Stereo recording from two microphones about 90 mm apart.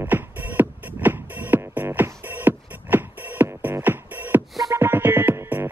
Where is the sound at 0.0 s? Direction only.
20° right (ahead or behind).